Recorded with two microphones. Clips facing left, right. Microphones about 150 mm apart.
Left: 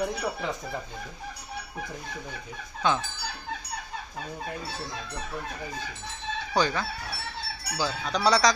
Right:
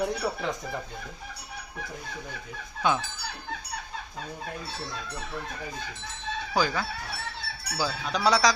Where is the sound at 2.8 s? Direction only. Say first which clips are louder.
Even; 10° right (ahead or behind).